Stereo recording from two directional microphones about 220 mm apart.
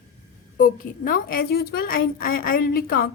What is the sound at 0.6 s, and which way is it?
A woman's voice, 40° left (ahead or behind).